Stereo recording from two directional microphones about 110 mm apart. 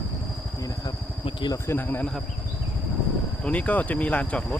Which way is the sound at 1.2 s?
45° left (ahead or behind).